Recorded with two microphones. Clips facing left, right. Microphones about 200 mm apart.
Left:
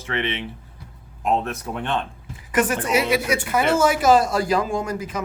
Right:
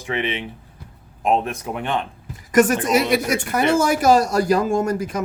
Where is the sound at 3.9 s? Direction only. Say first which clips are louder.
Right 1 dB; 45° right (ahead or behind).